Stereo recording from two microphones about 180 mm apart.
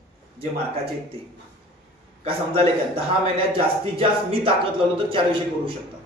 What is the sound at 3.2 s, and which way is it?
Speech, 30° right (ahead or behind).